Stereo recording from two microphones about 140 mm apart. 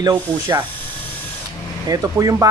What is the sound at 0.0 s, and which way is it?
Speech, 30° right (ahead or behind).